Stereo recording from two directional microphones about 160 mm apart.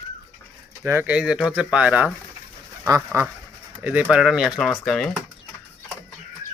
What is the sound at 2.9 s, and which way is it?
Speech, 20° right (ahead or behind).